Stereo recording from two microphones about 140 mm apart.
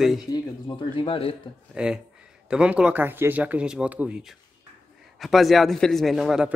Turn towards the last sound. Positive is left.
turn(degrees=0)  # may be behind; listen again after turning